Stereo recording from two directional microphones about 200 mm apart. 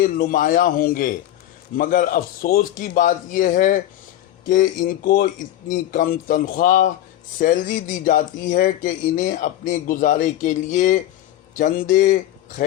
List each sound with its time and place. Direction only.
0.0 s a man's voice: 45° left (ahead or behind)